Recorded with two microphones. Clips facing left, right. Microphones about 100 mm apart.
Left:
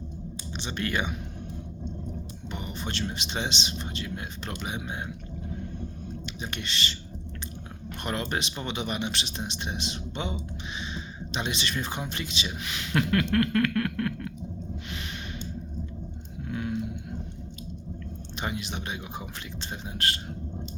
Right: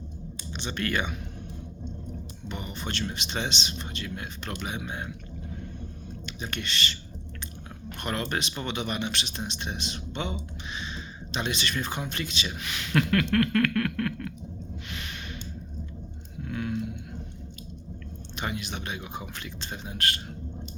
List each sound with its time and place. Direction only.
0.5 s speech: 20° left (ahead or behind)
2.5 s a sound: 20° left (ahead or behind)
3.1 s speech: 20° left (ahead or behind)
6.2 s speech: 20° left (ahead or behind)
8.0 s speech: 20° left (ahead or behind)
16.5 s a sound: 20° left (ahead or behind)
18.3 s speech: 25° left (ahead or behind)